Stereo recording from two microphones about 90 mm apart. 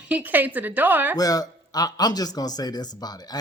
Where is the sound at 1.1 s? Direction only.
45° left (ahead or behind).